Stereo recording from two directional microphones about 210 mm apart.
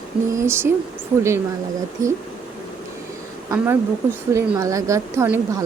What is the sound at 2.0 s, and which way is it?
Speech, 15° right (ahead or behind).